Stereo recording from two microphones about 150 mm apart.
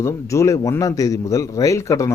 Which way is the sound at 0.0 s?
20° left (ahead or behind).